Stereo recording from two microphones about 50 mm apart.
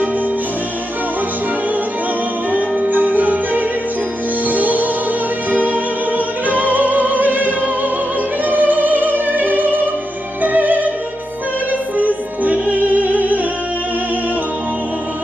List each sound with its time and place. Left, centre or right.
2.5 s music: right
11.9 s music: right